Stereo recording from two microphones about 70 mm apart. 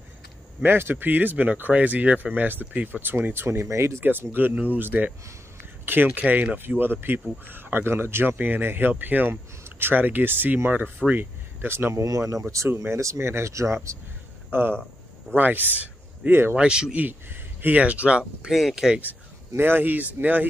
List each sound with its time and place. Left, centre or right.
0.7 s speech: right
4.0 s speech: right
12.0 s speech: right
14.5 s speech: right
16.5 s speech: centre
17.0 s speech: right
18.5 s speech: centre
18.9 s speech: right